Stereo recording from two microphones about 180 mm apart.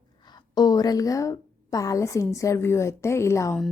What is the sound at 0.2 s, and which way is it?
A woman's voice, 25° left (ahead or behind).